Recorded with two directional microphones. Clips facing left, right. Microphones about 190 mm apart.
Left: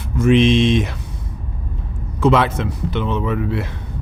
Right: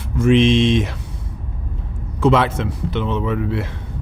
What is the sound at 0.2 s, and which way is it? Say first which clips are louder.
Speech: even; 30° right (ahead or behind).